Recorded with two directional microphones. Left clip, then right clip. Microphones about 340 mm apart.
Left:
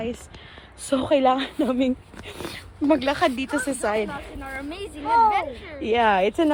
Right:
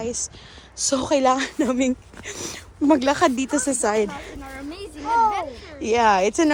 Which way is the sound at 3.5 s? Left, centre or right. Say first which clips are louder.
Right 2 dB; centre.